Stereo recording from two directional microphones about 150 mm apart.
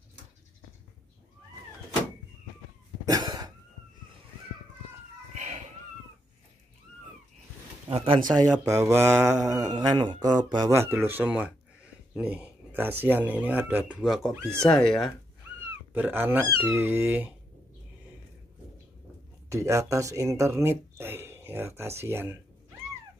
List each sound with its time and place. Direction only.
3.1 s cough: 25° right (ahead or behind)
5.3 s a sound: 50° right (ahead or behind)
7.9 s speech: 40° right (ahead or behind)
8.4 s speech: 20° right (ahead or behind)
10.7 s speech: 15° right (ahead or behind); by 15.1 s 5° left (ahead or behind)
15.9 s speech: 15° right (ahead or behind)
19.5 s speech: 20° right (ahead or behind)